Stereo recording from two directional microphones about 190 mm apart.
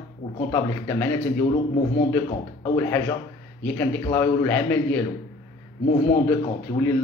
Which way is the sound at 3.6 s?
10° left (ahead or behind).